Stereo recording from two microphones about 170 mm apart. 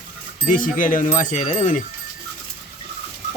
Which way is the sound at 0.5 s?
50° left (ahead or behind).